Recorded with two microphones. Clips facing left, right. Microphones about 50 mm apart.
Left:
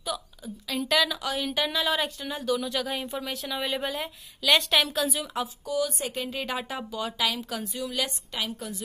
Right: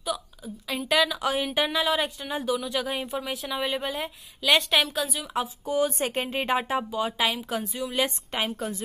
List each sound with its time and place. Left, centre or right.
0.1 s a sound: centre
0.7 s speech: centre
1.2 s speech: right
1.8 s speech: centre
5.3 s speech: right
8.0 s a woman's voice: right